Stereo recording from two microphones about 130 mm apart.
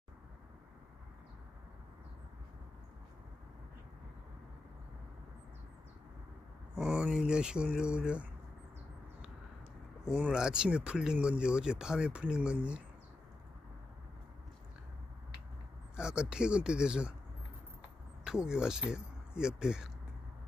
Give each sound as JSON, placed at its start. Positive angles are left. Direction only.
{"t": 6.7, "sound": "speech", "side_deg": -5}
{"t": 10.0, "sound": "speech", "side_deg": -10}
{"t": 16.0, "sound": "speech", "side_deg": -5}
{"t": 18.3, "sound": "speech", "side_deg": -5}